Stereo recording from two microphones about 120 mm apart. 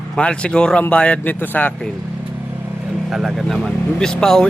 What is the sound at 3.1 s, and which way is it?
A man's voice, centre (ahead or behind).